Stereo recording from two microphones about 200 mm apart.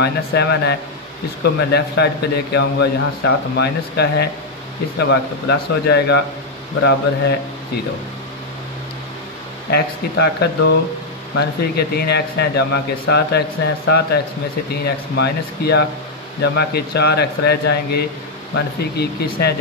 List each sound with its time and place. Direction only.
0.0 s speech: 55° left (ahead or behind)
9.7 s speech: 55° left (ahead or behind)